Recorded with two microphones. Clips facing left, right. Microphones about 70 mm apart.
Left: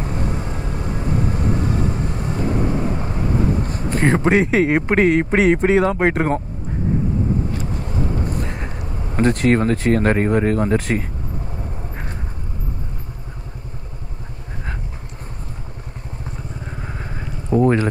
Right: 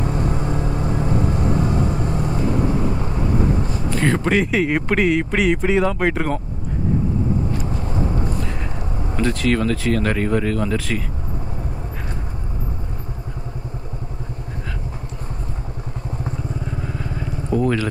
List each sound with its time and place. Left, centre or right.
0.0 s vehicle: right
3.6 s a sound: left
4.0 s speech: left
9.1 s speech: left
16.8 s vehicle: left